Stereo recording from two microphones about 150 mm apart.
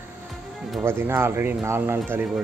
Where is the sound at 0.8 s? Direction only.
15° right (ahead or behind).